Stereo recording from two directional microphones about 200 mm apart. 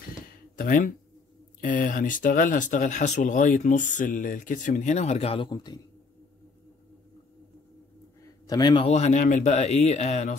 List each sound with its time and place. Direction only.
0.3 s a sound: 45° left (ahead or behind)
1.6 s speech: 45° left (ahead or behind); by 5.8 s 20° left (ahead or behind)
8.5 s speech: 20° left (ahead or behind)